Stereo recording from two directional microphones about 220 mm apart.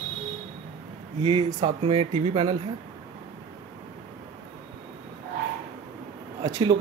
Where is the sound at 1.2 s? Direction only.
20° right (ahead or behind).